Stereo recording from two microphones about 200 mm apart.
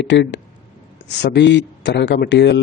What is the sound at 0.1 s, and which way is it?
A man's voice, 65° left (ahead or behind).